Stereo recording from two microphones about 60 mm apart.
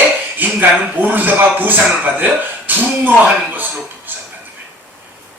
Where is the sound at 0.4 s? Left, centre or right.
Right.